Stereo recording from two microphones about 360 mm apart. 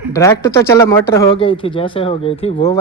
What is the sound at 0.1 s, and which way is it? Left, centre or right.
Speech, centre.